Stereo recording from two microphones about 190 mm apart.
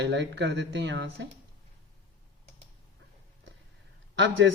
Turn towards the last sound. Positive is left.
turn(degrees=-75)  # may be behind; listen again after turning